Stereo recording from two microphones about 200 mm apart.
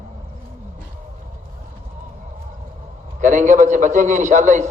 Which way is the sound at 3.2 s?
40° right (ahead or behind).